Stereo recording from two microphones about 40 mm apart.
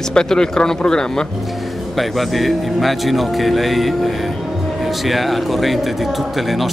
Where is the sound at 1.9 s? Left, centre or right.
Centre.